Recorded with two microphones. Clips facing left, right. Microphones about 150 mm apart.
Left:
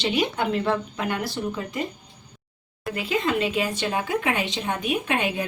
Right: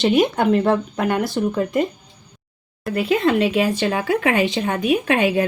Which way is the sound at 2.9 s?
55° right (ahead or behind).